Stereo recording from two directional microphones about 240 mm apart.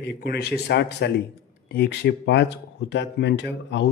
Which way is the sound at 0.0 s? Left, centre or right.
Left.